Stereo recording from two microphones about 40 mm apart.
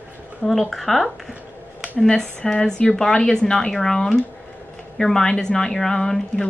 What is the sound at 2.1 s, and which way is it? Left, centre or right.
A woman's voice, centre.